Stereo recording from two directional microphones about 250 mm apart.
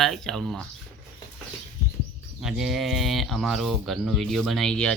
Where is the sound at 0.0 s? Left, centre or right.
Centre.